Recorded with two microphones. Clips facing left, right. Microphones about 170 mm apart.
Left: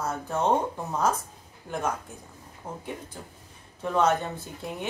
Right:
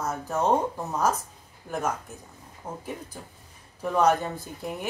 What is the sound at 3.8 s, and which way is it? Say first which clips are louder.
Speech: right 2 dB; 10° right (ahead or behind).